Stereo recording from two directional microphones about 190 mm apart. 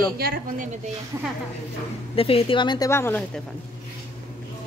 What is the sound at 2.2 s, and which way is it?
Speech, 30° left (ahead or behind).